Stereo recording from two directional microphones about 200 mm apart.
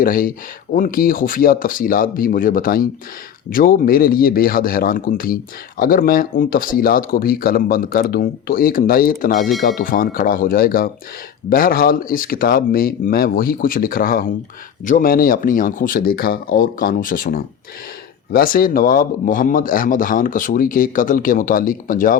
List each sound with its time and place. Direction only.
0.0 s speech: 45° left (ahead or behind)